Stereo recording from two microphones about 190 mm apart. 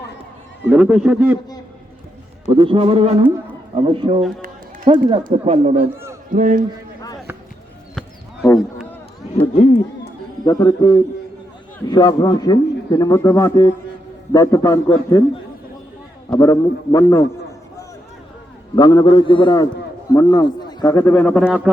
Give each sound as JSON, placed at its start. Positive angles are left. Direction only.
{"t": 0.7, "sound": "a man's voice", "side_deg": -5}
{"t": 2.5, "sound": "a sound", "side_deg": -25}
{"t": 3.8, "sound": "speech", "side_deg": -25}
{"t": 5.2, "sound": "a sound", "side_deg": -35}
{"t": 6.3, "sound": "a man's voice", "side_deg": -45}
{"t": 9.3, "sound": "speech", "side_deg": 35}
{"t": 10.0, "sound": "music", "side_deg": 20}
{"t": 11.9, "sound": "a man's voice", "side_deg": 20}
{"t": 16.3, "sound": "a man's voice", "side_deg": 20}
{"t": 18.8, "sound": "a man's voice", "side_deg": 20}
{"t": 21.0, "sound": "a man's voice", "side_deg": 10}